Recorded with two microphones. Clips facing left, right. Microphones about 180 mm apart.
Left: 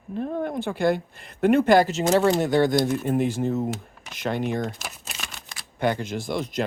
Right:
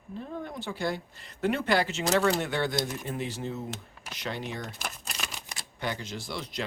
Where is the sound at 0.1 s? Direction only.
60° left (ahead or behind).